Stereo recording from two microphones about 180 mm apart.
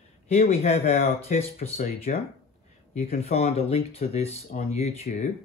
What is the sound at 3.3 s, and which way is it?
Speech, 35° left (ahead or behind).